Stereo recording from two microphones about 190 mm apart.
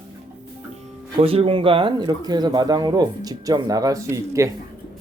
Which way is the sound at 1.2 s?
30° right (ahead or behind).